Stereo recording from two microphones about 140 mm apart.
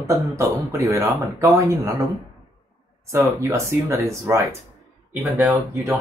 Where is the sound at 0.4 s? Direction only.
20° right (ahead or behind).